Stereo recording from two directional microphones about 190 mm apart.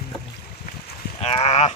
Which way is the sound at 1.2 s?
30° left (ahead or behind).